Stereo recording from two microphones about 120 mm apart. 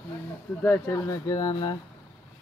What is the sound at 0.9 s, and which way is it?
Speech, 30° left (ahead or behind).